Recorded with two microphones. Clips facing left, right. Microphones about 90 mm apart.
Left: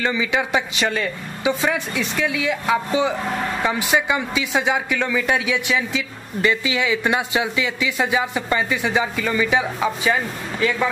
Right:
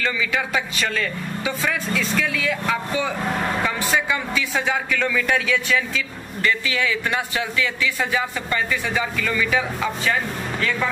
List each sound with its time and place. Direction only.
0.0 s speech: 20° left (ahead or behind)